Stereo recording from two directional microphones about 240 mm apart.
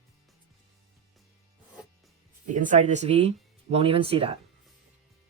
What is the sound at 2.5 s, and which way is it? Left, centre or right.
Speech, right.